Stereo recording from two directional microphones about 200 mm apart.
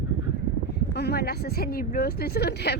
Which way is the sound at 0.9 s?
55° left (ahead or behind).